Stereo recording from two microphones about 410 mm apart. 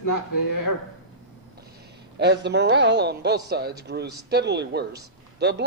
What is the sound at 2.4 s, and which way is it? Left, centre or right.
A woman's voice, right.